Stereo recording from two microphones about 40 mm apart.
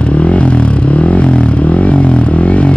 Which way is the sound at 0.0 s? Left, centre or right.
Left.